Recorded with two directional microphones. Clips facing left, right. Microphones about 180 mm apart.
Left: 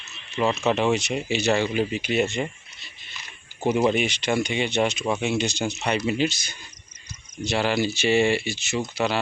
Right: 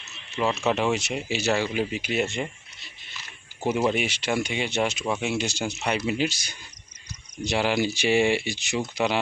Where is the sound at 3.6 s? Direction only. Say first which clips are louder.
Left 3 dB; 5° right (ahead or behind).